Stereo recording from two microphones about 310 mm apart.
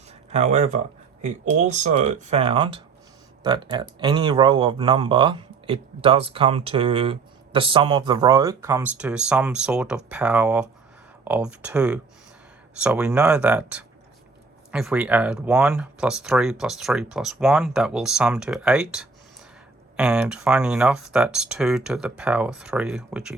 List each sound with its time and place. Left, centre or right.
0.1 s speech: right; by 23.3 s centre